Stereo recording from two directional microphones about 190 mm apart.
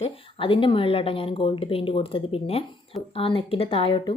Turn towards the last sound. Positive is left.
turn(degrees=25)  # may be behind; listen again after turning